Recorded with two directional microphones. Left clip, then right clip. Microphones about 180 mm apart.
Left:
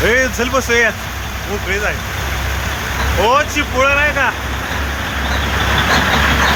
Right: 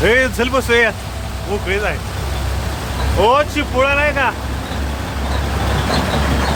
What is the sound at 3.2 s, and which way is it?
Speech, 25° right (ahead or behind).